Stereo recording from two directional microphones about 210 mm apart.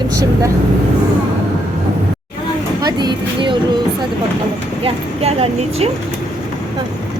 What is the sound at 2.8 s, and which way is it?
Vehicle, 20° right (ahead or behind).